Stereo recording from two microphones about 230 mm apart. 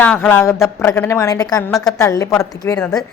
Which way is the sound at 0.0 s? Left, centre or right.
Centre.